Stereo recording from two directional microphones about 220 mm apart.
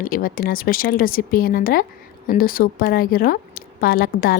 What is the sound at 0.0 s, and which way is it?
A woman's voice, 40° left (ahead or behind).